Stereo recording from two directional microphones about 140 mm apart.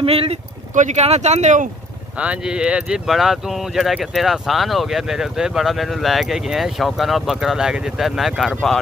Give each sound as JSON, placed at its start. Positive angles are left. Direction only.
{"t": 0.0, "sound": "speech", "side_deg": -45}
{"t": 0.7, "sound": "speech", "side_deg": -55}
{"t": 2.1, "sound": "speech", "side_deg": -10}